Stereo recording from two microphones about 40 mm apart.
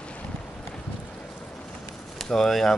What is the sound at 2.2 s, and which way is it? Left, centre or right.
Speech, centre.